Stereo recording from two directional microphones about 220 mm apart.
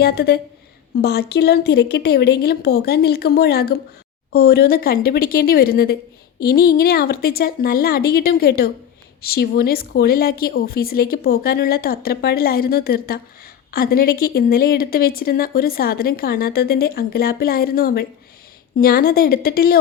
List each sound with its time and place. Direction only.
0.0 s a woman's voice: 45° left (ahead or behind)